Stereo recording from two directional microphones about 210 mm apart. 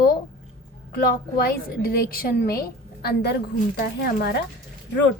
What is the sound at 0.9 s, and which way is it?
A woman's voice, 45° left (ahead or behind).